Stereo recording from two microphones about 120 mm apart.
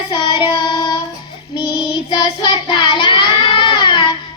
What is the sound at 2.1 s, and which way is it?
Child singing, 40° left (ahead or behind).